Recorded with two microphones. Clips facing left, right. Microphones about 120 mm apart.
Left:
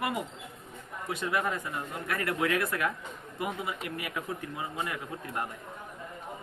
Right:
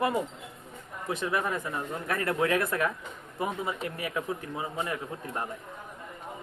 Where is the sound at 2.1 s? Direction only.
30° right (ahead or behind).